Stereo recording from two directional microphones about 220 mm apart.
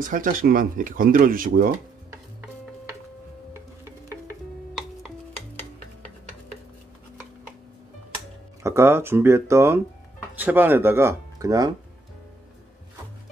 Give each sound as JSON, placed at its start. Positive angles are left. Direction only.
{"t": 0.0, "sound": "speech", "side_deg": -40}
{"t": 8.6, "sound": "speech", "side_deg": -10}